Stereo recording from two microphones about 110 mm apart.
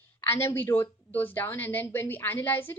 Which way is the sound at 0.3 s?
20° left (ahead or behind).